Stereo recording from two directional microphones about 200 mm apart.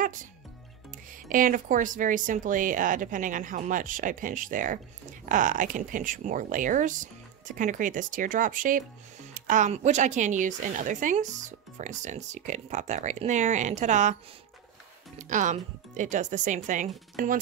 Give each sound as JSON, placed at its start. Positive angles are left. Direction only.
{"t": 0.0, "sound": "music", "side_deg": -40}
{"t": 1.1, "sound": "a woman's voice", "side_deg": -45}
{"t": 15.1, "sound": "a woman's voice", "side_deg": -40}